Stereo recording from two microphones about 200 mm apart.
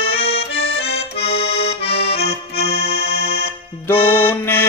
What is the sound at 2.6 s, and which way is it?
Accordion, 55° left (ahead or behind).